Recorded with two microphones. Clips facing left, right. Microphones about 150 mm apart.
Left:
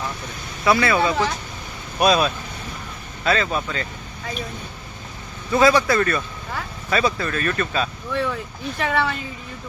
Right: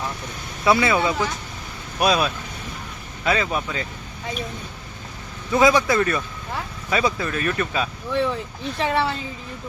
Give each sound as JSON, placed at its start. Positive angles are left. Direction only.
{"t": 0.6, "sound": "speech", "side_deg": -20}
{"t": 2.0, "sound": "speech", "side_deg": -5}
{"t": 5.5, "sound": "speech", "side_deg": -15}
{"t": 8.1, "sound": "speech", "side_deg": -25}